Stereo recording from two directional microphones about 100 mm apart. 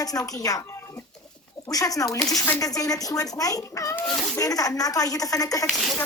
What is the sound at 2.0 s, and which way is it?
Speech, centre (ahead or behind).